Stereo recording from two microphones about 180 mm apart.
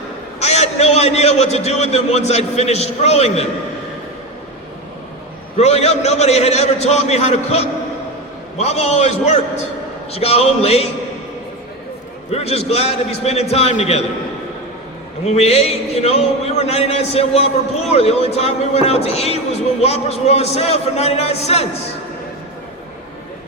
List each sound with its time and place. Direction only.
0.3 s a man's voice: 35° left (ahead or behind)
5.5 s speech: 35° left (ahead or behind)
12.3 s speech: 35° left (ahead or behind)
15.2 s speech: 35° left (ahead or behind)